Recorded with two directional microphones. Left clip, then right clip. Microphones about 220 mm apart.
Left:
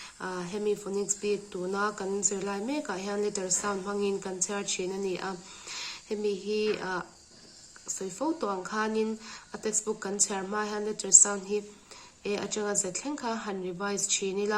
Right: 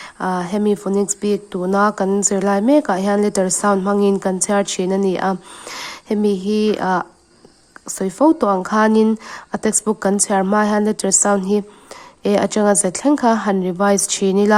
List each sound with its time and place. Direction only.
0.0 s a woman's voice: 50° right (ahead or behind)